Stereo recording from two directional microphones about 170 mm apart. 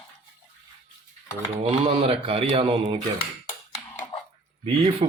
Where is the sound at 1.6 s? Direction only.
35° right (ahead or behind).